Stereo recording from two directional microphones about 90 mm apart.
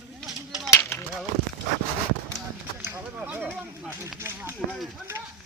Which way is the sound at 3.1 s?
15° right (ahead or behind).